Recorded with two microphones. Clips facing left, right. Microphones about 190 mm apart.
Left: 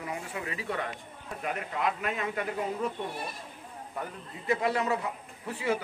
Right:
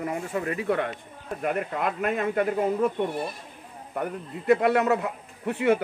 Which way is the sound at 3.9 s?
60° right (ahead or behind).